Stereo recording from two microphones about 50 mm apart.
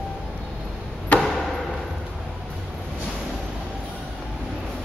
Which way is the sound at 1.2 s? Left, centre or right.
Centre.